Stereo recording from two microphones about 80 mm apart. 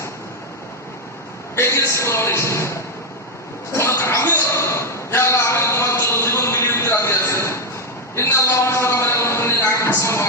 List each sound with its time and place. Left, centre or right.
1.5 s a man's voice: left
3.7 s a sound: left
8.1 s a man's voice: left